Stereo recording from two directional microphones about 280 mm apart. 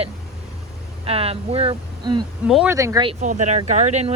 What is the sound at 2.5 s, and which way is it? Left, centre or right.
Speech, centre.